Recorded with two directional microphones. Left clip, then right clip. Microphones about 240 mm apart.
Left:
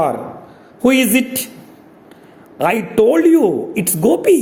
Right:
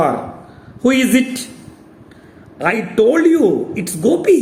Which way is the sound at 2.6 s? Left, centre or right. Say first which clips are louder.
Left 1 dB; left.